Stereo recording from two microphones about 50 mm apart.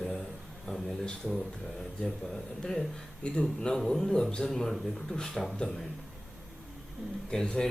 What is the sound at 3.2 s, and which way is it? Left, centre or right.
A man's voice, centre.